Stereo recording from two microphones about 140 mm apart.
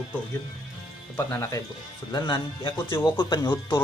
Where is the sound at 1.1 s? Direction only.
20° left (ahead or behind).